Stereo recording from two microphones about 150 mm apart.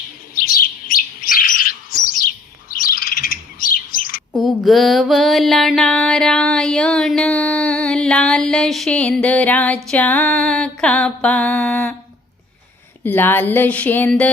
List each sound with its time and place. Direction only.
0.3 s bird: 75° left (ahead or behind)
4.3 s music: centre (ahead or behind)
9.9 s mantra: 10° left (ahead or behind)
13.0 s mantra: 15° left (ahead or behind)